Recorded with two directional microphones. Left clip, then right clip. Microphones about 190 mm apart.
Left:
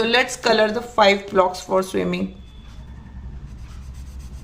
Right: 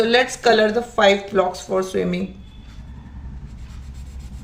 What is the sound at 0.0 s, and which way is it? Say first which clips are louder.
Speech: right 2 dB; 20° left (ahead or behind).